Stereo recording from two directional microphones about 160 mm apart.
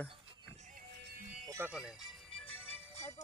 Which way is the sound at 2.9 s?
45° left (ahead or behind).